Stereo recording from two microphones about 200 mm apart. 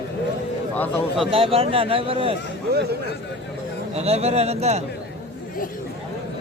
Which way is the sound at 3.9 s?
30° right (ahead or behind).